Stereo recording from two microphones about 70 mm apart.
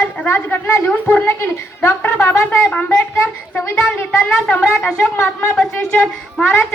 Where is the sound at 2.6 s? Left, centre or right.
Centre.